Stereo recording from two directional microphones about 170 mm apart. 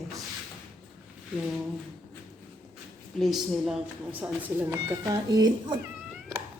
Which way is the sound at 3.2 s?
Centre (ahead or behind).